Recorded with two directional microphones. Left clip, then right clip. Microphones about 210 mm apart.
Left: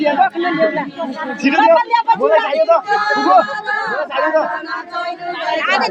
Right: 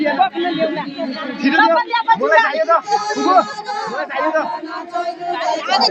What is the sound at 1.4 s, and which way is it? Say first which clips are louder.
Speech: left 2 dB; 15° left (ahead or behind).